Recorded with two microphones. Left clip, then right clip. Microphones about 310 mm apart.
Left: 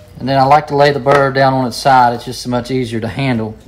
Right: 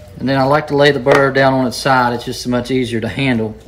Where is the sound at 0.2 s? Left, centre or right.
Centre.